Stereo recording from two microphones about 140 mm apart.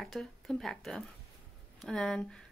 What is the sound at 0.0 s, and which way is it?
A woman's voice, centre (ahead or behind).